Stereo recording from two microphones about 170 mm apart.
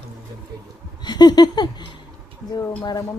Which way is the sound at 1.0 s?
25° left (ahead or behind).